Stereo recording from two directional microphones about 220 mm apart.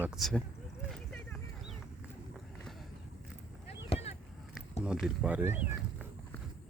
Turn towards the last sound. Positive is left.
turn(degrees=-5)  # may be behind; listen again after turning